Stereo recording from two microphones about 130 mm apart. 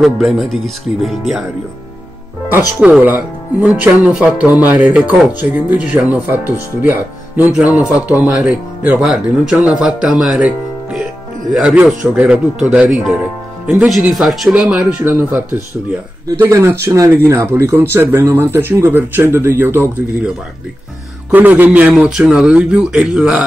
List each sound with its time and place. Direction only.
0.0 s speech: centre (ahead or behind)
2.8 s speech: 10° right (ahead or behind)
21.3 s speech: 15° right (ahead or behind)